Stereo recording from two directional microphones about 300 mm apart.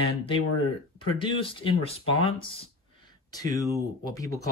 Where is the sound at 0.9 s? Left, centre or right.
Centre.